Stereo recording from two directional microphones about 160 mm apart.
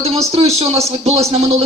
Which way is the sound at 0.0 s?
40° right (ahead or behind).